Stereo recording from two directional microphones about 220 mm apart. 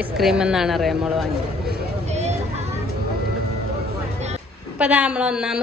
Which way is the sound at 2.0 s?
30° right (ahead or behind).